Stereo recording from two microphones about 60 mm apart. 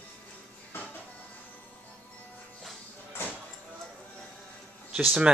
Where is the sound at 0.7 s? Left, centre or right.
Left.